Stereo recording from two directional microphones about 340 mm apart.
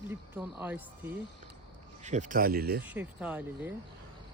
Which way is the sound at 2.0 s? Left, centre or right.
Right.